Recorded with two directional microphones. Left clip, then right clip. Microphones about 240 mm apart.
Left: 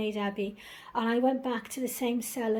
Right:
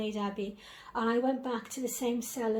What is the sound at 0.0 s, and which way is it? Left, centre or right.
A woman's voice, left.